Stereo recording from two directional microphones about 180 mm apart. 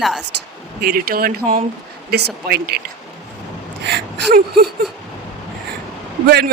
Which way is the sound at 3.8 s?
60° right (ahead or behind).